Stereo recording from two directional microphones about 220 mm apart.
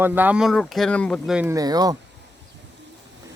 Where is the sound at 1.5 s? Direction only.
15° right (ahead or behind).